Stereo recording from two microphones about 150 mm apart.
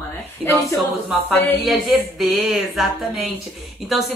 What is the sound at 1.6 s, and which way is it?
Speech, centre (ahead or behind).